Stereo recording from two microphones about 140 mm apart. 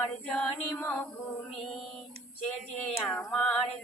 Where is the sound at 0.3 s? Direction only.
5° left (ahead or behind).